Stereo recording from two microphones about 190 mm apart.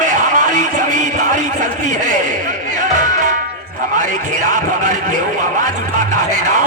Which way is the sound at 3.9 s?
40° right (ahead or behind).